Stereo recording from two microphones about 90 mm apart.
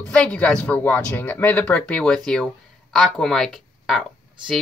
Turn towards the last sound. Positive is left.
turn(degrees=0)  # may be behind; listen again after turning